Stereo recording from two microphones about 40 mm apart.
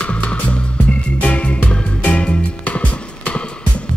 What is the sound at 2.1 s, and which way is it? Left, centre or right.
Music, left.